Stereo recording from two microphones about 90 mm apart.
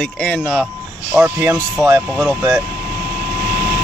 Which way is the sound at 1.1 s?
20° right (ahead or behind).